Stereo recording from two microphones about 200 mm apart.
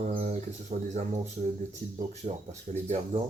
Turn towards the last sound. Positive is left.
turn(degrees=-35)  # may be behind; listen again after turning